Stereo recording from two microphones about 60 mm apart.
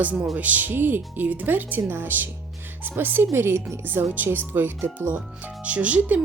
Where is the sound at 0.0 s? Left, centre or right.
Right.